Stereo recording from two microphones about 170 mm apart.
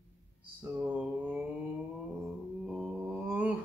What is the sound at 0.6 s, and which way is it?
Mantra, 10° right (ahead or behind).